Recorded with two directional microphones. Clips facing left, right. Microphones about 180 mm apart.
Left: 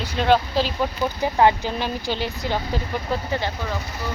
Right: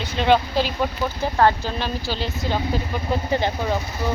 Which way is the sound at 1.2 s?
15° left (ahead or behind).